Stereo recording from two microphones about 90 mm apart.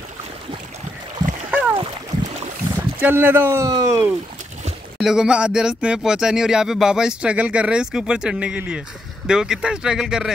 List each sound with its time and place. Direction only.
1.5 s splash: 15° right (ahead or behind)
3.0 s speech: 20° right (ahead or behind)
3.6 s speech: 40° right (ahead or behind)
4.9 s speech: 5° right (ahead or behind)